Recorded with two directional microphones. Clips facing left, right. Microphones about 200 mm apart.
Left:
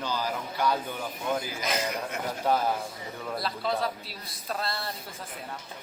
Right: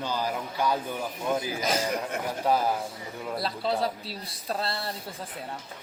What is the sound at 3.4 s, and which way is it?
A man's voice, 30° right (ahead or behind).